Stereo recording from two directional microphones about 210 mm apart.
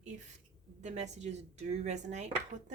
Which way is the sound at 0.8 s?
35° right (ahead or behind).